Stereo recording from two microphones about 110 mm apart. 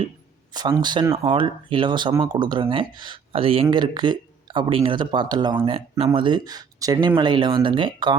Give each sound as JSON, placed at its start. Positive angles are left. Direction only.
{"t": 0.8, "sound": "speech", "side_deg": -40}
{"t": 1.1, "sound": "speech", "side_deg": -50}
{"t": 3.7, "sound": "speech", "side_deg": -45}
{"t": 5.6, "sound": "speech", "side_deg": -65}
{"t": 6.1, "sound": "speech", "side_deg": -45}